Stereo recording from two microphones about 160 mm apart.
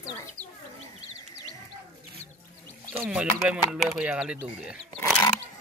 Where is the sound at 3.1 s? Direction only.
5° right (ahead or behind).